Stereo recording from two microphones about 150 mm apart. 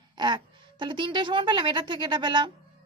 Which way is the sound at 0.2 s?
30° right (ahead or behind).